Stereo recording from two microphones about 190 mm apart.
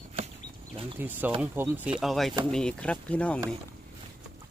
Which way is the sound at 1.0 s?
10° right (ahead or behind).